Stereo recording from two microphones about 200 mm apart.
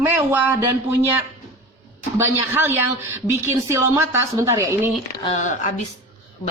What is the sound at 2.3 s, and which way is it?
Speech, 10° right (ahead or behind).